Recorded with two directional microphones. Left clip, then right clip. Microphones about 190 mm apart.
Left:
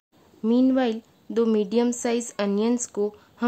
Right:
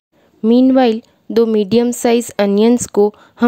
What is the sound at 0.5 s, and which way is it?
A woman's voice, 40° right (ahead or behind).